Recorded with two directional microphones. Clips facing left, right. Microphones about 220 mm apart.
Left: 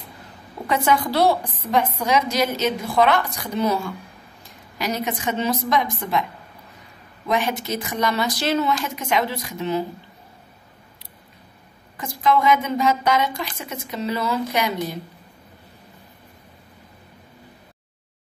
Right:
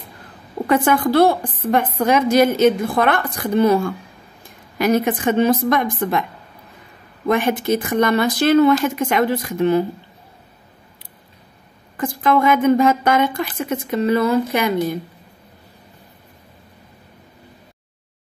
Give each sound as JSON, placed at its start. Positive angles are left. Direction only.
{"t": 0.7, "sound": "a woman's voice", "side_deg": -50}
{"t": 7.2, "sound": "a woman's voice", "side_deg": -55}
{"t": 12.0, "sound": "a woman's voice", "side_deg": -55}